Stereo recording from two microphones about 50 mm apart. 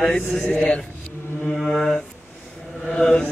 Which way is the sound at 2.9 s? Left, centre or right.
Centre.